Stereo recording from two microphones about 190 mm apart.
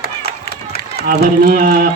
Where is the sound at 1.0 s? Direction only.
50° right (ahead or behind).